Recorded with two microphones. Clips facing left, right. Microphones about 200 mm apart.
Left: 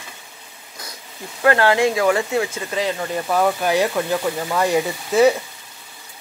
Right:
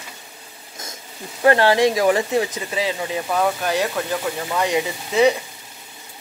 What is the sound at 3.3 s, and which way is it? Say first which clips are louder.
Speech: left 3 dB; 5° left (ahead or behind).